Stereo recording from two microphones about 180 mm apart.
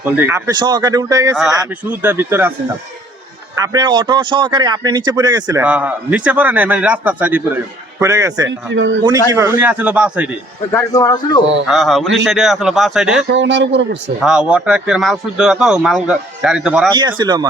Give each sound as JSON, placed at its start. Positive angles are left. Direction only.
{"t": 0.0, "sound": "a man's voice", "side_deg": -10}
{"t": 3.6, "sound": "speech", "side_deg": -20}
{"t": 5.6, "sound": "a man's voice", "side_deg": -10}
{"t": 8.4, "sound": "speech", "side_deg": -90}
{"t": 9.3, "sound": "a man's voice", "side_deg": -15}
{"t": 10.7, "sound": "speech", "side_deg": 20}
{"t": 11.6, "sound": "speech", "side_deg": 0}
{"t": 13.2, "sound": "speech", "side_deg": -85}
{"t": 14.2, "sound": "speech", "side_deg": -5}
{"t": 16.9, "sound": "speech", "side_deg": -25}